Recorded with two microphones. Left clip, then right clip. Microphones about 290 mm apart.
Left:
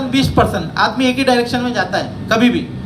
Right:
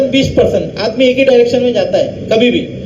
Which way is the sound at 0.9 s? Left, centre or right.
Left.